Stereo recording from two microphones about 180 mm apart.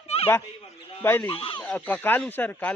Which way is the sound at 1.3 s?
30° left (ahead or behind).